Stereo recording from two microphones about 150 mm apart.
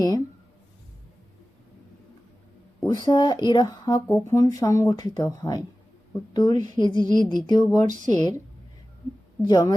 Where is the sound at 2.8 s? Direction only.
30° left (ahead or behind).